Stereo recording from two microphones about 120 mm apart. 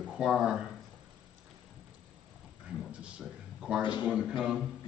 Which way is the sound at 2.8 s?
10° right (ahead or behind).